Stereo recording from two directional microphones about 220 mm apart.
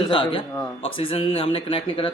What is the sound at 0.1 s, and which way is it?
Speech, 25° left (ahead or behind).